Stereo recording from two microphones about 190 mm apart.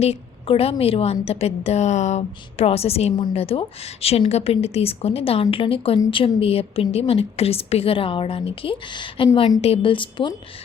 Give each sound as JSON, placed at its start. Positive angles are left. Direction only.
{"t": 0.0, "sound": "a woman's voice", "side_deg": 30}